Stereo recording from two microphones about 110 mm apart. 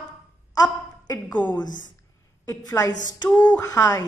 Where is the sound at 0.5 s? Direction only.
35° left (ahead or behind).